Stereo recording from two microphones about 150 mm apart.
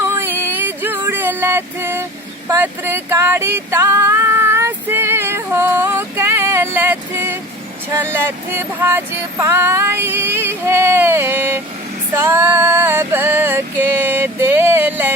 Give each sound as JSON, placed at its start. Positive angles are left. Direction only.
{"t": 0.0, "sound": "a sound", "side_deg": -15}
{"t": 8.5, "sound": "female singing", "side_deg": -15}
{"t": 12.1, "sound": "music", "side_deg": -15}